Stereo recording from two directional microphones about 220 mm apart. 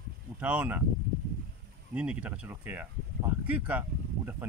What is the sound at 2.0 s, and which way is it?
Speech, 5° right (ahead or behind).